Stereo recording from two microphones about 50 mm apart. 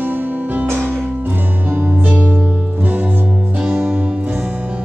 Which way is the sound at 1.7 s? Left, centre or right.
Right.